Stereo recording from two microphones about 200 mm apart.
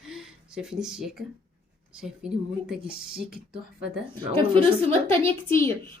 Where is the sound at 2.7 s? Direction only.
5° right (ahead or behind).